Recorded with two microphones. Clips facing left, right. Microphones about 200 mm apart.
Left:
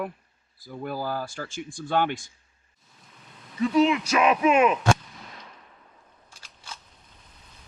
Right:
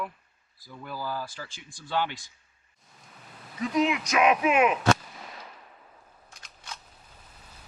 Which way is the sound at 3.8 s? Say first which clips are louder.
Left 2 dB; 10° right (ahead or behind).